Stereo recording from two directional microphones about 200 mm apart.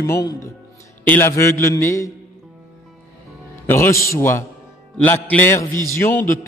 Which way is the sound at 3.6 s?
10° left (ahead or behind).